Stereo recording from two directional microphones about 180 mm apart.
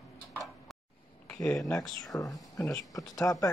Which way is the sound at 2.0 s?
20° left (ahead or behind).